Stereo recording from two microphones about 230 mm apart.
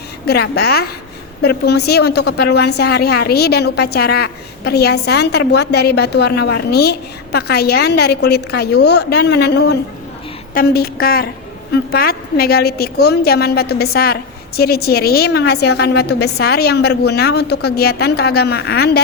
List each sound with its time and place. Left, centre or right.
0.3 s a woman's voice: left